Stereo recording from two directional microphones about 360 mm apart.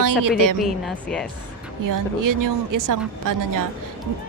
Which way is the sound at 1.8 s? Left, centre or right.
Right.